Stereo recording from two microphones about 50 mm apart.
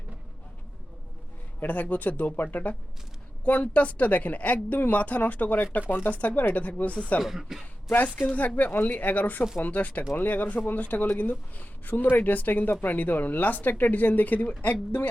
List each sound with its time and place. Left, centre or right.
1.5 s speech: left
7.2 s speech: centre
8.4 s speech: left